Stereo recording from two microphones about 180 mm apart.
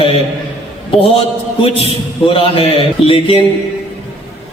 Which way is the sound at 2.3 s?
30° left (ahead or behind).